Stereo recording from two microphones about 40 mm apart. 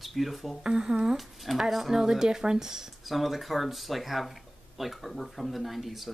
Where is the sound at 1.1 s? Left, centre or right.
Centre.